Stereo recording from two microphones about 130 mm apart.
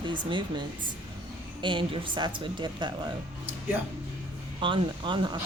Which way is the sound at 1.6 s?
40° right (ahead or behind).